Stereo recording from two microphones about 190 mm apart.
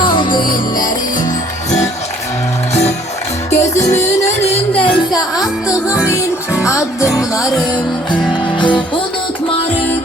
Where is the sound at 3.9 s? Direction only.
35° left (ahead or behind).